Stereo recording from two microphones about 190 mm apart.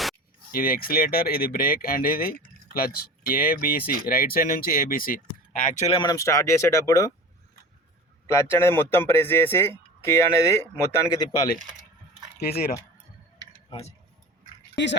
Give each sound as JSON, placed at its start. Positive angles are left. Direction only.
{"t": 0.5, "sound": "speech", "side_deg": 50}
{"t": 6.0, "sound": "speech", "side_deg": 20}
{"t": 8.3, "sound": "speech", "side_deg": 15}
{"t": 12.4, "sound": "speech", "side_deg": 55}
{"t": 13.7, "sound": "speech", "side_deg": 30}